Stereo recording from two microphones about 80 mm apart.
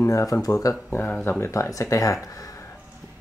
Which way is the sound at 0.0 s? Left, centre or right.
Left.